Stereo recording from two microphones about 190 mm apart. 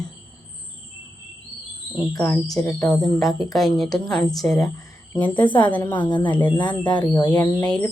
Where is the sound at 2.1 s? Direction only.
10° left (ahead or behind).